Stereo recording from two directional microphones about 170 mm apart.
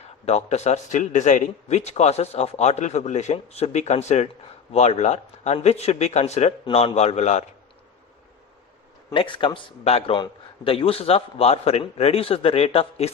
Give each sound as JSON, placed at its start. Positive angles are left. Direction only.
{"t": 0.0, "sound": "a man's voice", "side_deg": 40}
{"t": 9.0, "sound": "a man's voice", "side_deg": 30}